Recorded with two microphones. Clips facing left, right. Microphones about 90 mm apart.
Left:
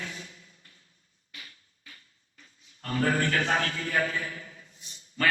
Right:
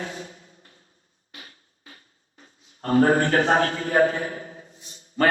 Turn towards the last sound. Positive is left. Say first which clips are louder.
# right 7 dB
turn(degrees=-35)  # may be behind; listen again after turning